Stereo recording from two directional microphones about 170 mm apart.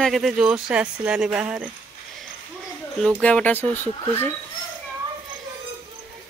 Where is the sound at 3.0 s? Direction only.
5° left (ahead or behind).